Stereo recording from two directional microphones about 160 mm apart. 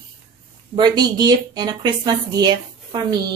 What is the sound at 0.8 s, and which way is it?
A woman's voice, 25° right (ahead or behind).